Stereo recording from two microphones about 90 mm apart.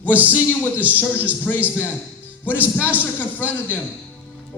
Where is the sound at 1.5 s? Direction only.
15° left (ahead or behind).